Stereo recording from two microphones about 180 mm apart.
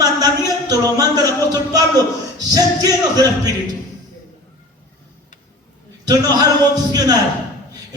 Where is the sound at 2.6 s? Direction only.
20° right (ahead or behind).